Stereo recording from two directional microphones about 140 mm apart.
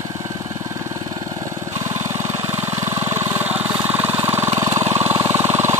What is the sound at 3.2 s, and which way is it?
Vehicle, 15° right (ahead or behind).